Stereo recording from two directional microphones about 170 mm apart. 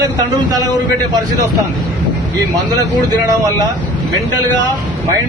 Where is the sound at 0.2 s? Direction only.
20° right (ahead or behind).